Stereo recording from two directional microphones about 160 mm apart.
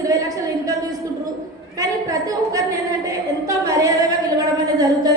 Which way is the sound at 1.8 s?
20° right (ahead or behind).